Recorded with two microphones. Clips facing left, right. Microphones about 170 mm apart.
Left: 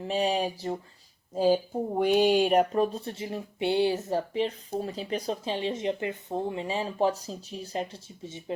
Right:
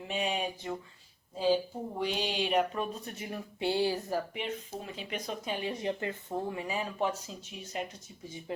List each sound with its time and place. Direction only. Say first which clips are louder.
0.0 s speech: left 6 dB; 35° left (ahead or behind)
1.4 s speech: left 5 dB; 45° left (ahead or behind); by 8.5 s 25° left (ahead or behind)